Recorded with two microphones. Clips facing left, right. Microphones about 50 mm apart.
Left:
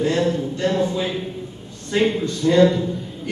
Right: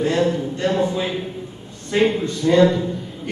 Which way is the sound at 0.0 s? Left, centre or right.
Right.